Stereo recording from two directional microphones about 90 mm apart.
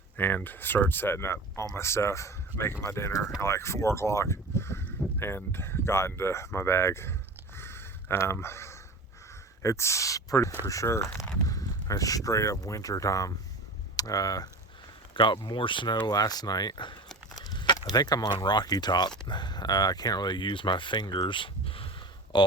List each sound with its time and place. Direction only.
0.2 s speech: 20° left (ahead or behind); by 14.5 s 45° left (ahead or behind)
15.1 s speech: 65° left (ahead or behind)
17.3 s a sound: 50° left (ahead or behind)
17.9 s speech: 45° left (ahead or behind); by 21.8 s 85° left
22.3 s speech: 55° left (ahead or behind)